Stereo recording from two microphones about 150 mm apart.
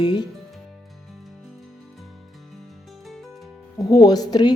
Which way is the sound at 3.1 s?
Centre (ahead or behind).